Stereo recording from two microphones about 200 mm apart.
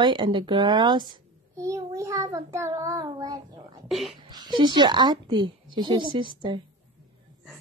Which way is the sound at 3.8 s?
Centre (ahead or behind).